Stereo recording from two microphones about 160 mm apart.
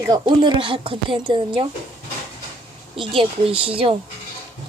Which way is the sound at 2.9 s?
35° right (ahead or behind).